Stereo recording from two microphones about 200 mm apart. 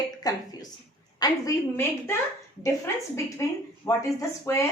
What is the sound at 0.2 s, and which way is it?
A woman's voice, 20° left (ahead or behind).